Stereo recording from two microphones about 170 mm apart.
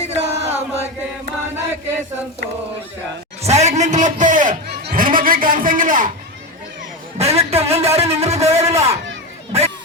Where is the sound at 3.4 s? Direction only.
40° right (ahead or behind).